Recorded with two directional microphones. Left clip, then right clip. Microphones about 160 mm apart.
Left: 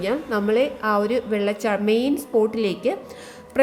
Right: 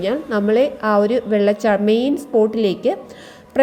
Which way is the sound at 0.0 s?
15° right (ahead or behind).